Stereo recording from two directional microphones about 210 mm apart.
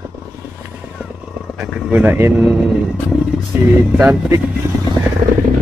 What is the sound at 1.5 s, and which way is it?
Speech, centre (ahead or behind).